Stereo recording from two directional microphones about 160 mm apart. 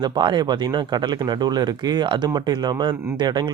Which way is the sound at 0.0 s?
30° right (ahead or behind).